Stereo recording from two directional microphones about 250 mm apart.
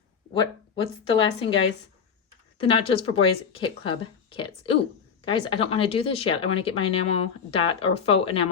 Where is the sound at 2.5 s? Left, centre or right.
Left.